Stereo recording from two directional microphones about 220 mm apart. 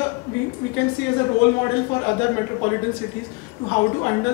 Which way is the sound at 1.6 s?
15° left (ahead or behind).